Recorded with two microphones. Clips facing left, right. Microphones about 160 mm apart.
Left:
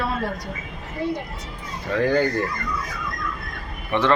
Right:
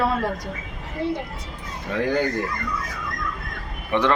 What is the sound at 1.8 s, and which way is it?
Speech, 15° right (ahead or behind).